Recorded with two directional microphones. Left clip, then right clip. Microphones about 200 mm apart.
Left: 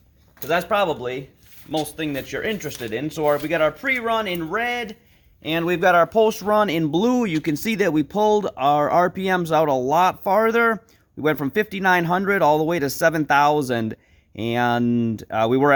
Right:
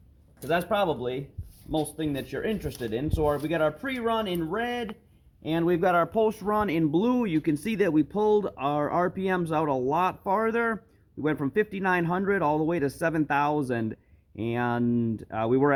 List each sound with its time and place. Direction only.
0.4 s speech: 15° left (ahead or behind)
5.5 s speech: 40° left (ahead or behind); by 15.7 s 65° left (ahead or behind)